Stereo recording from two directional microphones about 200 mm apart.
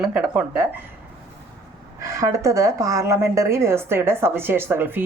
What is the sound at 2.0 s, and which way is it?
A woman's voice, 15° right (ahead or behind).